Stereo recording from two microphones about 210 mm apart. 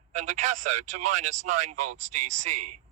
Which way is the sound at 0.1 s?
35° right (ahead or behind).